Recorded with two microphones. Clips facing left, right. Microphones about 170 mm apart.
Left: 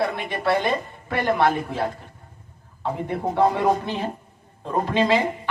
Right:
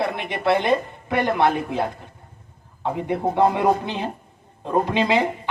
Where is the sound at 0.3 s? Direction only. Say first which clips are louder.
Right 5 dB; 20° right (ahead or behind).